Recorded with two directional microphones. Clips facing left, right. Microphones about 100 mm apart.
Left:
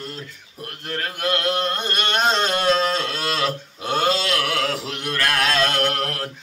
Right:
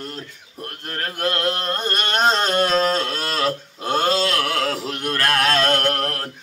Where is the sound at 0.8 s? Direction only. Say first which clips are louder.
Even; 35° right (ahead or behind).